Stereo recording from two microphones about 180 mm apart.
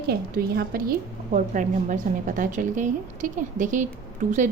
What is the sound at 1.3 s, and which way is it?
A woman's voice, 45° right (ahead or behind).